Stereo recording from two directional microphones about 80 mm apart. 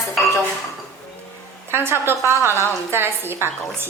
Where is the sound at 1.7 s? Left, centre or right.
Right.